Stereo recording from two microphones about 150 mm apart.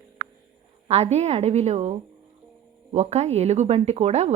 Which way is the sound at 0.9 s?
45° right (ahead or behind).